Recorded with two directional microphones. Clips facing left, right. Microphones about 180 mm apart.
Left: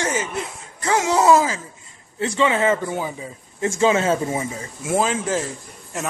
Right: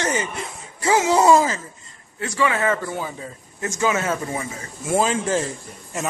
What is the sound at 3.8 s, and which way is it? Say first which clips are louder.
Speech: left 4 dB; 25° left (ahead or behind).